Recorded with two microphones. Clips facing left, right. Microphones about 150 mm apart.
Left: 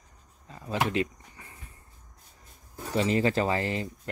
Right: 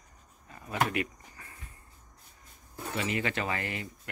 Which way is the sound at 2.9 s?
30° left (ahead or behind).